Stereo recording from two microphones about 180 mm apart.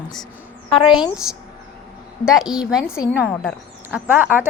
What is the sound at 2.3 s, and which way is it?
A woman's voice, centre (ahead or behind).